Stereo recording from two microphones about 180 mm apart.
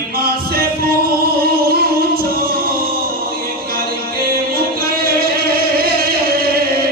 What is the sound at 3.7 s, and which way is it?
Music, 55° right (ahead or behind).